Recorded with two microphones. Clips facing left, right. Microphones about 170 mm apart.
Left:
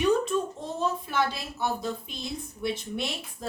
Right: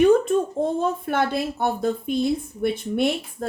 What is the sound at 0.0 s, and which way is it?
Speech, 55° right (ahead or behind).